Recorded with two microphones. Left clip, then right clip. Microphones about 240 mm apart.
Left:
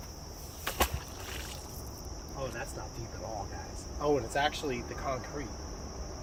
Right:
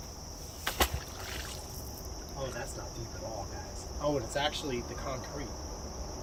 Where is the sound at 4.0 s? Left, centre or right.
Centre.